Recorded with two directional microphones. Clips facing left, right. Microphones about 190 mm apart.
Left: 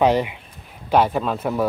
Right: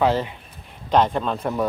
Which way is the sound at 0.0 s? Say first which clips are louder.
Left 3 dB; 15° left (ahead or behind).